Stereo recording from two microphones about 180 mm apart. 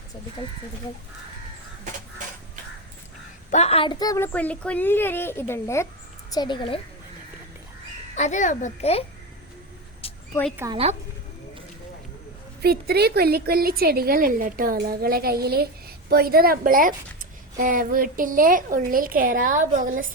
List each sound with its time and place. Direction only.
3.5 s a woman's voice: 35° left (ahead or behind)
8.1 s a child's voice: 40° left (ahead or behind)
10.0 s a sound: 35° left (ahead or behind)
10.6 s a woman's voice: 15° right (ahead or behind)
12.6 s a woman's voice: 60° right (ahead or behind)